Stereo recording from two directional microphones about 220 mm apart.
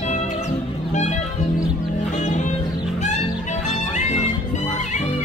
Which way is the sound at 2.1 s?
30° left (ahead or behind).